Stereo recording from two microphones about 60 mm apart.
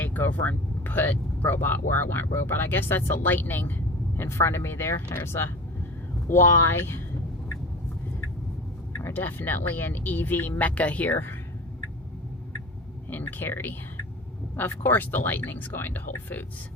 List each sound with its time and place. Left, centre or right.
0.0 s speech: left
4.2 s speech: left
9.0 s speech: left
13.1 s speech: left